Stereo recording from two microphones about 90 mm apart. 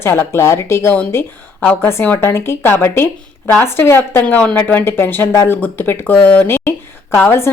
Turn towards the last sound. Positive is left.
turn(degrees=25)  # may be behind; listen again after turning